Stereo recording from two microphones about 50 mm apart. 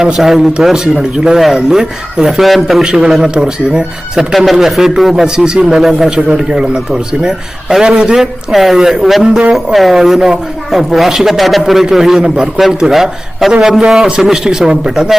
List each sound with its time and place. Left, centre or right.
0.0 s a man's voice: centre
2.8 s speech: centre
6.1 s a man's voice: centre
9.4 s a man's voice: right
9.7 s a man's voice: centre